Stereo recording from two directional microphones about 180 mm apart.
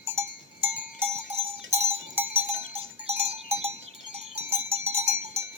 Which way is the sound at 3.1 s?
35° right (ahead or behind).